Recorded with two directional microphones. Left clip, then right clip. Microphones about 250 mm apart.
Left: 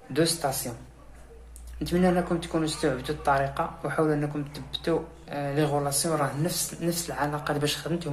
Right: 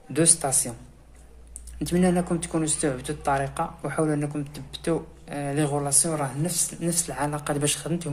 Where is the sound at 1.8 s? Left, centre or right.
Right.